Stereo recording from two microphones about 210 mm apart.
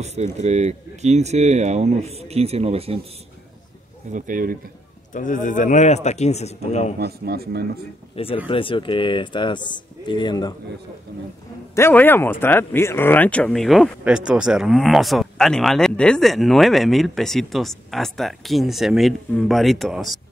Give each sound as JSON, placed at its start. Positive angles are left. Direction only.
{"t": 0.0, "sound": "speech", "side_deg": -30}
{"t": 4.1, "sound": "speech", "side_deg": -40}
{"t": 5.1, "sound": "speech", "side_deg": 40}
{"t": 7.0, "sound": "speech", "side_deg": -50}
{"t": 8.2, "sound": "speech", "side_deg": 30}
{"t": 11.7, "sound": "speech", "side_deg": 10}